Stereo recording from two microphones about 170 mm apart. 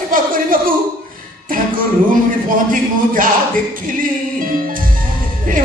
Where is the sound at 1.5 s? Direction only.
55° right (ahead or behind).